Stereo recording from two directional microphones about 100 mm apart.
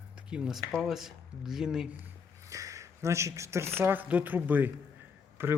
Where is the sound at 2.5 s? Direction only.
35° right (ahead or behind).